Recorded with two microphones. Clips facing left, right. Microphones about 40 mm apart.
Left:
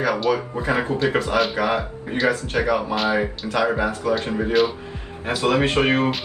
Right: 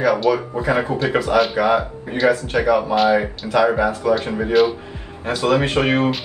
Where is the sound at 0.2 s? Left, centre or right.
Centre.